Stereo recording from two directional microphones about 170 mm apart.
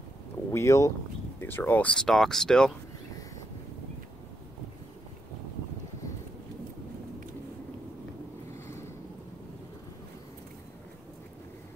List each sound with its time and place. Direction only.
0.5 s speech: 15° left (ahead or behind)